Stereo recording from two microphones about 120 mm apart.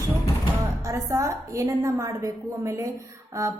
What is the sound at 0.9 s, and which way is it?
A woman's voice, 25° right (ahead or behind).